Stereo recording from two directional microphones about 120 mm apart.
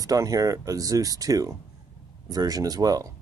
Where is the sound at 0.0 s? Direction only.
30° right (ahead or behind).